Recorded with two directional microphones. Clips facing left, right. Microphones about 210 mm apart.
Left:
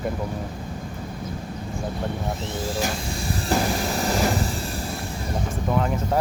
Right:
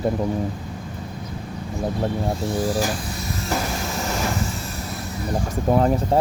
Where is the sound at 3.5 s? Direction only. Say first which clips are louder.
Left 3 dB; 30° left (ahead or behind).